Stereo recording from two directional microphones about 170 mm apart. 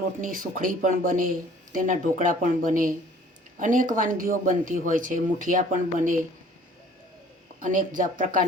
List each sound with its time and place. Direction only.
0.2 s speech: 55° right (ahead or behind)
7.6 s speech: 50° right (ahead or behind)